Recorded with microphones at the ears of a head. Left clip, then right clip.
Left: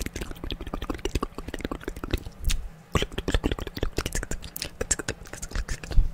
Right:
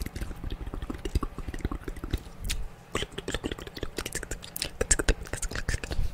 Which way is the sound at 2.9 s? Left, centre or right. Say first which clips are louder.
Left 5 dB; left.